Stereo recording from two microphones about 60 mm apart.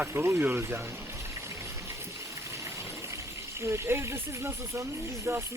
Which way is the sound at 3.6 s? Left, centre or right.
Right.